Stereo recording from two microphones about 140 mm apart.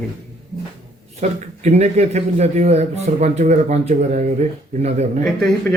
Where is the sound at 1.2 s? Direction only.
55° right (ahead or behind).